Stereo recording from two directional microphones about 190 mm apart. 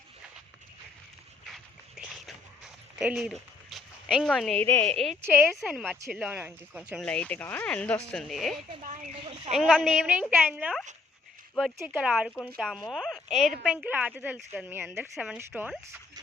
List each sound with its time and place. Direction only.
1.5 s a sound: centre (ahead or behind)
3.0 s speech: 5° right (ahead or behind)
5.2 s speech: 10° right (ahead or behind)
5.5 s speech: centre (ahead or behind)
7.0 s speech: 5° left (ahead or behind)
8.8 s speech: 40° right (ahead or behind)
9.5 s speech: centre (ahead or behind)